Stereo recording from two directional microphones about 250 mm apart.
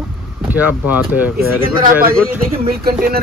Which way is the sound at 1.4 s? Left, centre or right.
Right.